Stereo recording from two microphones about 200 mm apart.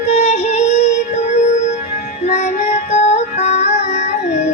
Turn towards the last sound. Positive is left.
turn(degrees=35)  # may be behind; listen again after turning